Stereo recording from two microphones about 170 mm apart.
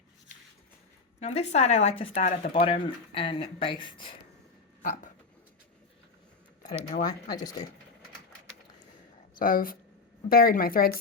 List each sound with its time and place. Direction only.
1.2 s speech: 40° left (ahead or behind)
2.5 s speech: 30° left (ahead or behind)
4.8 s speech: 50° left (ahead or behind)
7.0 s speech: 20° left (ahead or behind)
9.4 s speech: 55° left (ahead or behind)